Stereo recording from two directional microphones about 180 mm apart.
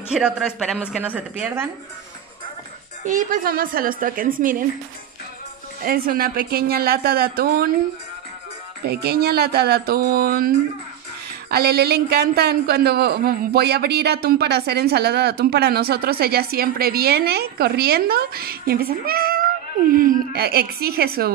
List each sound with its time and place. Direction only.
0.1 s a man's voice: 5° right (ahead or behind)
1.0 s a woman's voice: 10° right (ahead or behind)
3.1 s a woman's voice: 50° right (ahead or behind)
5.8 s a man's voice: 55° right (ahead or behind)
8.8 s a man's voice: 60° right (ahead or behind)
11.5 s a man's voice: 60° right (ahead or behind)